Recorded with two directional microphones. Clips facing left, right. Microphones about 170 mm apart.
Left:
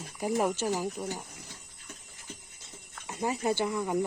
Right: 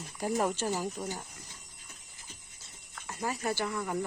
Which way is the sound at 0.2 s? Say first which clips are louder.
Left 2 dB; 10° left (ahead or behind).